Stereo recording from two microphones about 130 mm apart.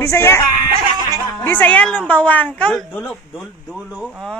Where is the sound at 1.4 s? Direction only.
15° left (ahead or behind).